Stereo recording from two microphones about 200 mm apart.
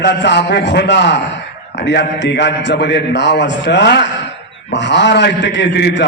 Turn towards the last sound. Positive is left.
turn(degrees=60)  # may be behind; listen again after turning